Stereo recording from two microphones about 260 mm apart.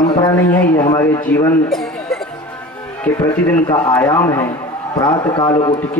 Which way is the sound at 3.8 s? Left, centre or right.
Centre.